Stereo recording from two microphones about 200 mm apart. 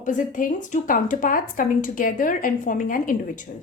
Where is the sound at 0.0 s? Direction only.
40° left (ahead or behind).